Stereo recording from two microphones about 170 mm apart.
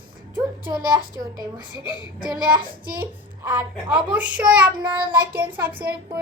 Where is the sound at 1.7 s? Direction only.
25° left (ahead or behind).